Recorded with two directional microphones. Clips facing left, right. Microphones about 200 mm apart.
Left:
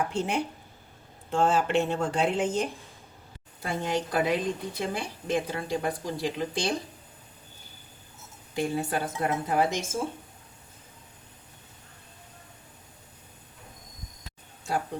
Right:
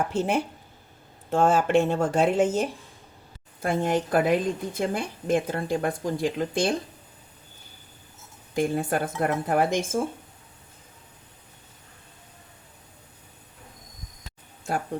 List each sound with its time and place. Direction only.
0.1 s speech: 5° right (ahead or behind)
1.3 s a woman's voice: 50° right (ahead or behind)
3.6 s a woman's voice: 50° right (ahead or behind)
8.5 s a woman's voice: 50° right (ahead or behind)